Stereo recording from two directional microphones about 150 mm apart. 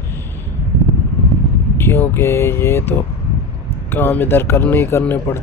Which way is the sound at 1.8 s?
15° left (ahead or behind).